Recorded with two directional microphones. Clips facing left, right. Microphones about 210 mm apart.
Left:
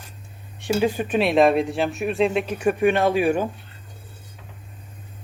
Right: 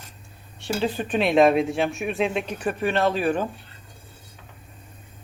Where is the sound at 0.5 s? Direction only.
15° left (ahead or behind).